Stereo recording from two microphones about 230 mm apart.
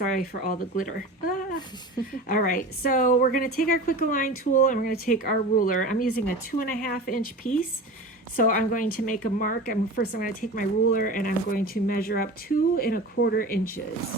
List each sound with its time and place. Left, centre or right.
0.0 s speech: left
8.4 s speech: left